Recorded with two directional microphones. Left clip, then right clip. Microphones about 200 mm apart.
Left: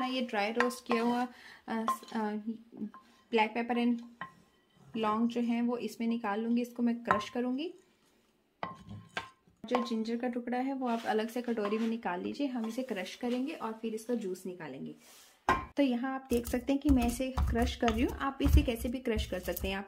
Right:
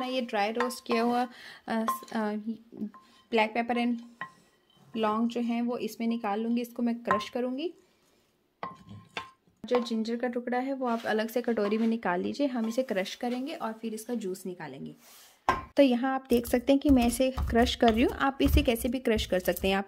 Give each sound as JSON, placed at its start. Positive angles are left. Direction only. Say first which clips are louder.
{"t": 0.0, "sound": "a sound", "louder": "right 3 dB", "side_deg": -40}
{"t": 0.7, "sound": "speech", "louder": "right 3 dB", "side_deg": -45}
{"t": 4.9, "sound": "a woman's voice", "louder": "right 3 dB", "side_deg": -45}
{"t": 9.8, "sound": "speech", "louder": "right 3 dB", "side_deg": -50}